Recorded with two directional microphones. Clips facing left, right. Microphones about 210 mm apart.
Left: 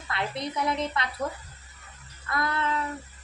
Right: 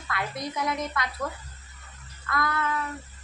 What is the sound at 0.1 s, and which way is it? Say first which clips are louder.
Speech: left 1 dB; 25° left (ahead or behind).